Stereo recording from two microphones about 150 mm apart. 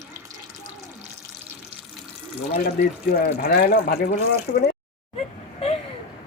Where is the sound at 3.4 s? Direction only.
80° left.